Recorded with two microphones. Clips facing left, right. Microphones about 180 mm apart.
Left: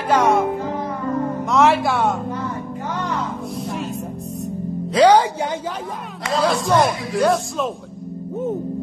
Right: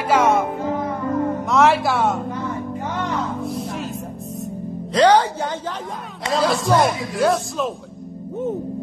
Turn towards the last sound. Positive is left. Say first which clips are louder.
# left 1 dB
turn(degrees=0)  # may be behind; listen again after turning